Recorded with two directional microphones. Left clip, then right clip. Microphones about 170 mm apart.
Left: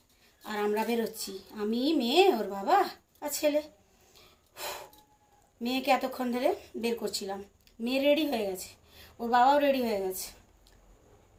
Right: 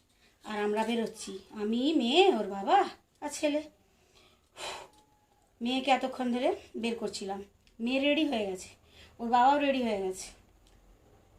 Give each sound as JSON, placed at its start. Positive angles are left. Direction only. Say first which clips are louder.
{"t": 0.4, "sound": "a woman's voice", "louder": "left 1 dB", "side_deg": 0}
{"t": 4.1, "sound": "breathing", "louder": "left 2 dB", "side_deg": 0}
{"t": 5.5, "sound": "a woman's voice", "louder": "left 1 dB", "side_deg": 0}